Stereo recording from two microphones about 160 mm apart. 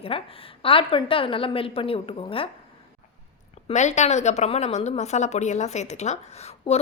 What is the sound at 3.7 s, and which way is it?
Speech, 45° left (ahead or behind).